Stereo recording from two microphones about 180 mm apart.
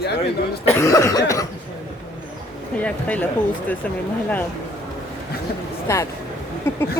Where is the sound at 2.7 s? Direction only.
10° left (ahead or behind).